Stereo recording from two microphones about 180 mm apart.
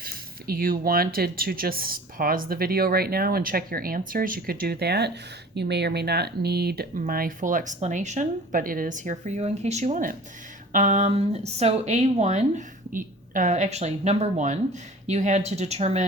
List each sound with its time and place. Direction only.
0.0 s speech: 55° right (ahead or behind); by 16.0 s 35° right (ahead or behind)